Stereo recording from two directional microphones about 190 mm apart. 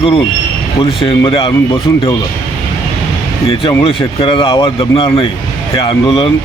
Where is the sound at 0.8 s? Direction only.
30° left (ahead or behind).